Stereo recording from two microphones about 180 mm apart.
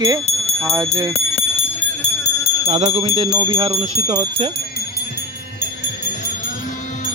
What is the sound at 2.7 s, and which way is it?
Speech, 35° right (ahead or behind).